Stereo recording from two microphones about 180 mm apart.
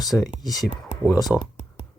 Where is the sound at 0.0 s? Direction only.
Centre (ahead or behind).